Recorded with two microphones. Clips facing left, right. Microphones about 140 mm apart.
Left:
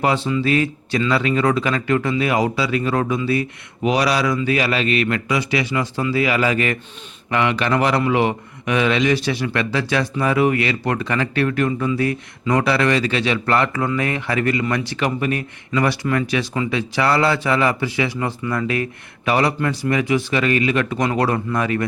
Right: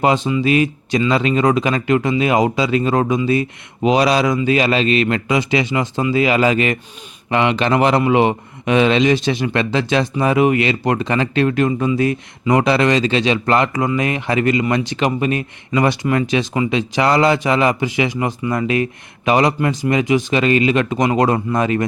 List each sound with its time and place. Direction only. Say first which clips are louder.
0.0 s a man's voice: right 3 dB; 20° right (ahead or behind)